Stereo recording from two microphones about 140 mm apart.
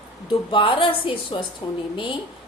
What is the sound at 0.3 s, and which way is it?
A woman's voice, 35° left (ahead or behind).